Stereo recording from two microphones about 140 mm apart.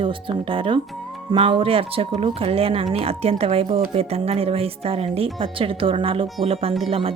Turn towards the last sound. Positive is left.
turn(degrees=-40)  # may be behind; listen again after turning